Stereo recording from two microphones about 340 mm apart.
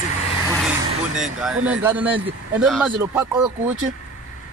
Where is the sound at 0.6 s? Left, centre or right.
Centre.